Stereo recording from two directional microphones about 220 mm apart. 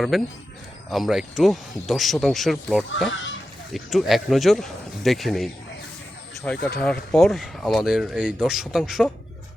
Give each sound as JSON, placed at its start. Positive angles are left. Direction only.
{"t": 0.1, "sound": "speech", "side_deg": 0}
{"t": 3.1, "sound": "speech", "side_deg": 55}
{"t": 3.7, "sound": "speech", "side_deg": 0}